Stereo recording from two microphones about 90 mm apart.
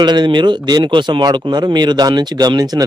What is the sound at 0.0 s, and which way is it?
Speech, 55° right (ahead or behind).